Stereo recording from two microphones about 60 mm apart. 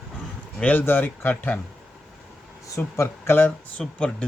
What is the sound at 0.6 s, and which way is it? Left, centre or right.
Speech, left.